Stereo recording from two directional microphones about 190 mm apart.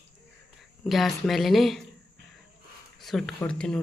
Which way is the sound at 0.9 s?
Centre (ahead or behind).